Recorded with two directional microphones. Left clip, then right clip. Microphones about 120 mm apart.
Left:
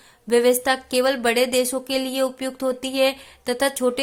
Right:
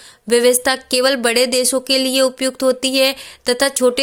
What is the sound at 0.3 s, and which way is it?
Speech, 25° right (ahead or behind).